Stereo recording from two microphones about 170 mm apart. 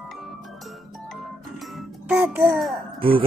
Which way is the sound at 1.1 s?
Centre (ahead or behind).